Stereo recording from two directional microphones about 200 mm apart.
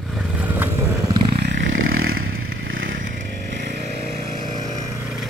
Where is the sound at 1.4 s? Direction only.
50° right (ahead or behind).